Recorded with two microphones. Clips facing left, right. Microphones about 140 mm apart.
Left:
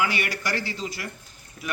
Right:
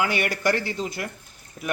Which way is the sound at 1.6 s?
35° right (ahead or behind).